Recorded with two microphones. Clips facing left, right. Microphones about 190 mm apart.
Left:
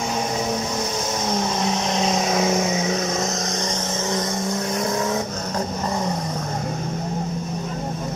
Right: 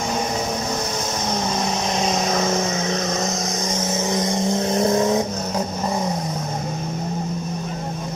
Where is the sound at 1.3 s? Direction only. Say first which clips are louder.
Left 1 dB; centre (ahead or behind); by 5.2 s 20° right (ahead or behind).